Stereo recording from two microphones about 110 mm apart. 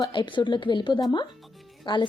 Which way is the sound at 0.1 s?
45° left (ahead or behind).